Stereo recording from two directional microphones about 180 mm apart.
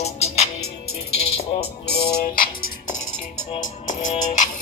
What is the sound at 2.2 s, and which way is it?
Music, 50° left (ahead or behind).